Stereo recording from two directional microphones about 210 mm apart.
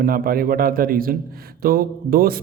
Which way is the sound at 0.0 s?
45° right (ahead or behind).